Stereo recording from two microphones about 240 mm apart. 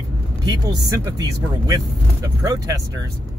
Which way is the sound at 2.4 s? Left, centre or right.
Centre.